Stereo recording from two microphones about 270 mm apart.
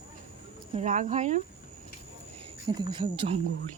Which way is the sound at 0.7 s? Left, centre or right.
Right.